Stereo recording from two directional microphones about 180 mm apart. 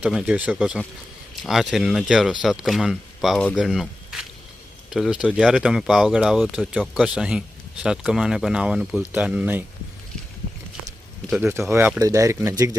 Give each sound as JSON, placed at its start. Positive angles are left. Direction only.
{"t": 0.0, "sound": "speech", "side_deg": -5}
{"t": 11.3, "sound": "speech", "side_deg": -10}